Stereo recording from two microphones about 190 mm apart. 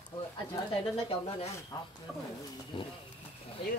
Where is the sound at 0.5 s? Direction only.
30° left (ahead or behind).